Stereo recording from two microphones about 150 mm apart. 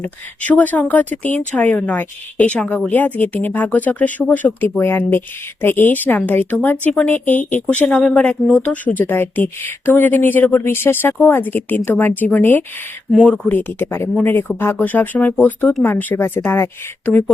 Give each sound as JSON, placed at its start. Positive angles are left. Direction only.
{"t": 0.0, "sound": "a woman's voice", "side_deg": 10}